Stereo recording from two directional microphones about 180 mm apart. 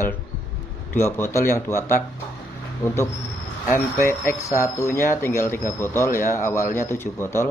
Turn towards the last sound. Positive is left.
turn(degrees=15)  # may be behind; listen again after turning